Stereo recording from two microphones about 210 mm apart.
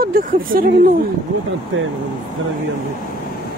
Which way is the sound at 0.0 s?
40° right (ahead or behind).